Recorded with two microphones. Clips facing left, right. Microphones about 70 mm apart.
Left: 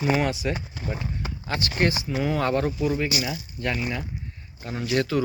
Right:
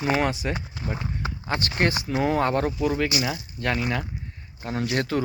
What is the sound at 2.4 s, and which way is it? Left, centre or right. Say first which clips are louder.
Speech: right 1 dB; right.